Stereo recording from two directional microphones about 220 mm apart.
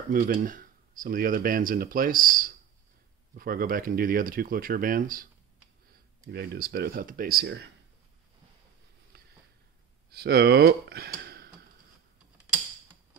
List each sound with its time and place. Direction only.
0.1 s speech: 40° right (ahead or behind)
6.3 s speech: 45° right (ahead or behind)
9.1 s a sound: 45° right (ahead or behind)
10.0 s speech: 45° right (ahead or behind)